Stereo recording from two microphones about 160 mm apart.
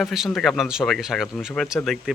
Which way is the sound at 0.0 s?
Centre (ahead or behind).